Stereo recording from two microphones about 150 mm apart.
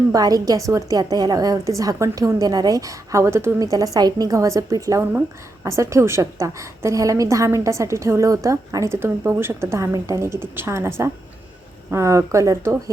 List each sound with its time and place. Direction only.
0.1 s a woman's voice: 25° right (ahead or behind)